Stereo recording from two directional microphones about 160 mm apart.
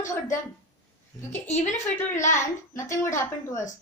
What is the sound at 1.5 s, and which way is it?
Speech, 45° left (ahead or behind).